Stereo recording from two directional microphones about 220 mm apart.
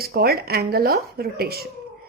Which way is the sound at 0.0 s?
45° right (ahead or behind).